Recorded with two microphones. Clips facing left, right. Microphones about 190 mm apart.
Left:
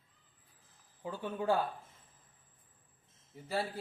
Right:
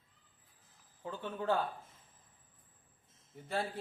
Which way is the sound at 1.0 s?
10° left (ahead or behind).